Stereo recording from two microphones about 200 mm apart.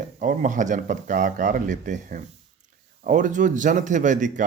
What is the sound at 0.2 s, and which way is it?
Speech, 40° right (ahead or behind).